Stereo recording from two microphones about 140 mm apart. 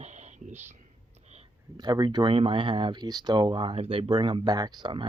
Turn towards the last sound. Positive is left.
turn(degrees=-30)  # may be behind; listen again after turning